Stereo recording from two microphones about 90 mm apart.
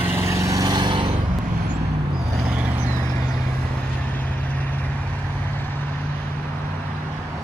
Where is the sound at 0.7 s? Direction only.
60° right (ahead or behind).